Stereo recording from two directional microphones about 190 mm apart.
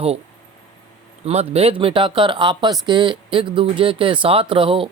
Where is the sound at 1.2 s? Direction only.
35° right (ahead or behind).